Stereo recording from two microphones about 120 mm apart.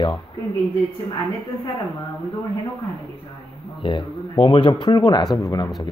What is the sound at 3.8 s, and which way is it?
Speech, 45° left (ahead or behind).